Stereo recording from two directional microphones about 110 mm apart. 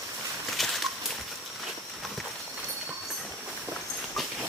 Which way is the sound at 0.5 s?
Centre (ahead or behind).